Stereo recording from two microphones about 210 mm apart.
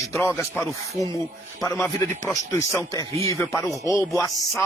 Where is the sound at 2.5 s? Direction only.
15° left (ahead or behind).